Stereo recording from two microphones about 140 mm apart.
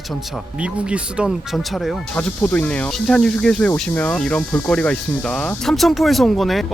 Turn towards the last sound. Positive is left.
turn(degrees=0)  # may be behind; listen again after turning